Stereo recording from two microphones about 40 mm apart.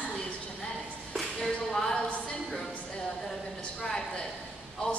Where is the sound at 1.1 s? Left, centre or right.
Centre.